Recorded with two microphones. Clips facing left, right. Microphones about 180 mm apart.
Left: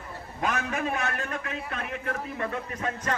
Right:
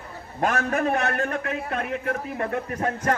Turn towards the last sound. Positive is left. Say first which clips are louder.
# right 6 dB
turn(degrees=-60)  # may be behind; listen again after turning